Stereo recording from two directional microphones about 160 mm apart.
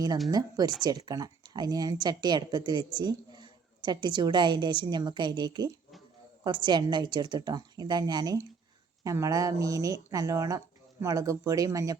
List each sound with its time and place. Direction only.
0.3 s speech: 25° right (ahead or behind)